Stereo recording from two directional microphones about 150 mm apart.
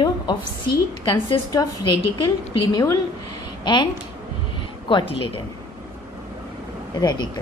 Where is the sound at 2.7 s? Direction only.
20° left (ahead or behind).